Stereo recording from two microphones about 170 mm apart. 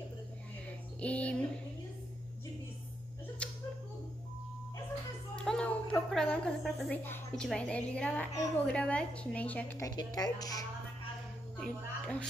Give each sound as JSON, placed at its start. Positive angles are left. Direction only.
{"t": 1.0, "sound": "a woman's voice", "side_deg": 5}
{"t": 3.4, "sound": "a sound", "side_deg": 5}
{"t": 5.3, "sound": "a sound", "side_deg": 5}
{"t": 7.1, "sound": "a woman's voice", "side_deg": 5}
{"t": 9.8, "sound": "speech", "side_deg": 20}
{"t": 11.5, "sound": "speech", "side_deg": 5}